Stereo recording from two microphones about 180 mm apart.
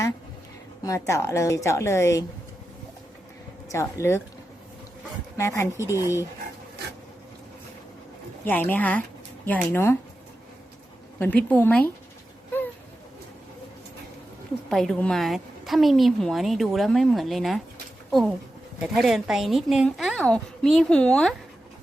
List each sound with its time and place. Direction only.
0.9 s a woman's voice: 15° left (ahead or behind)
3.7 s a woman's voice: 15° left (ahead or behind)
5.4 s a woman's voice: 15° left (ahead or behind)
8.4 s a woman's voice: 10° left (ahead or behind)
11.2 s a woman's voice: 5° left (ahead or behind)
14.7 s a woman's voice: centre (ahead or behind)